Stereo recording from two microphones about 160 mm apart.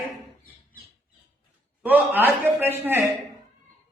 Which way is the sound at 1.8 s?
10° right (ahead or behind).